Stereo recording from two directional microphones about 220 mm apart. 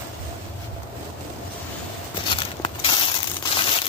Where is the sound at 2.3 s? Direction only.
25° left (ahead or behind).